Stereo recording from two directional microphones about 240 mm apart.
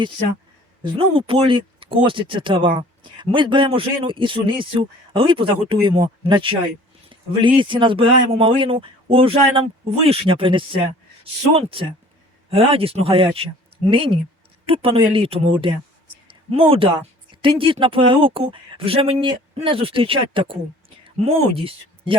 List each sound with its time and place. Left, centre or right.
0.8 s speech: right
16.5 s speech: right